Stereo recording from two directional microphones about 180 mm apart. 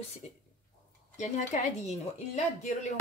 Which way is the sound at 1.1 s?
40° left (ahead or behind).